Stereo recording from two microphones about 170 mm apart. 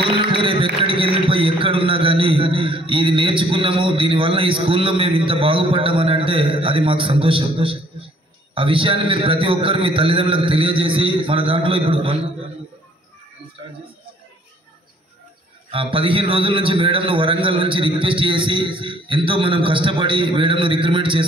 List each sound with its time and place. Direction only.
0.0 s a sound: 30° right (ahead or behind)
0.8 s a man's voice: 30° right (ahead or behind)
15.7 s a man's voice: 30° right (ahead or behind)